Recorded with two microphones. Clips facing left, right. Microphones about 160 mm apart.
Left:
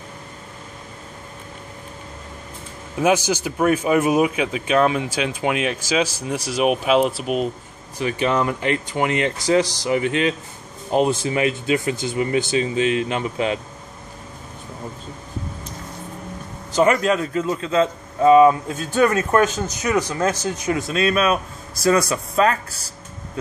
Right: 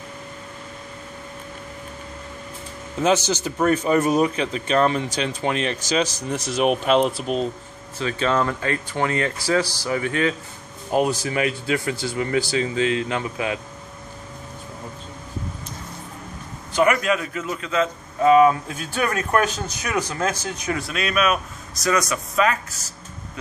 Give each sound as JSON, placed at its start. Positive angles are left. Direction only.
{"t": 3.0, "sound": "speech", "side_deg": 10}
{"t": 16.8, "sound": "a man's voice", "side_deg": 30}